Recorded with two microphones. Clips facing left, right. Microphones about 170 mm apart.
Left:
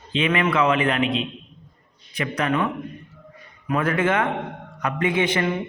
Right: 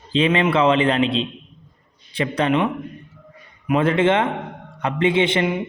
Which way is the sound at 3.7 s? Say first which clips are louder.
Right 4 dB; 25° right (ahead or behind).